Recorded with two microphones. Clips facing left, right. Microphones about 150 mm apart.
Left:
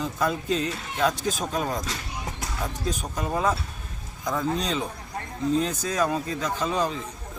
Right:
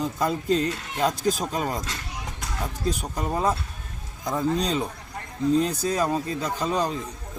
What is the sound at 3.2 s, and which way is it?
Speech, 35° right (ahead or behind).